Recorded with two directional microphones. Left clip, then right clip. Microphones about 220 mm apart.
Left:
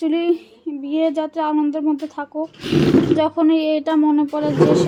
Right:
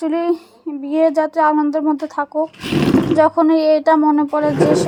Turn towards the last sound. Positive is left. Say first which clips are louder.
# right 1 dB
turn(degrees=-25)  # may be behind; listen again after turning